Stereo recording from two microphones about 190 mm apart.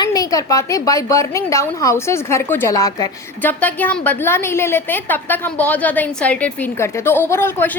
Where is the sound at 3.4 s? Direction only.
10° left (ahead or behind).